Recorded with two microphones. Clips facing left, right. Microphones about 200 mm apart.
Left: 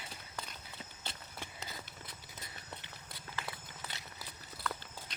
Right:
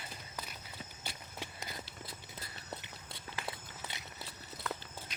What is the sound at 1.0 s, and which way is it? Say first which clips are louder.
Horse: right 2 dB; 10° right (ahead or behind).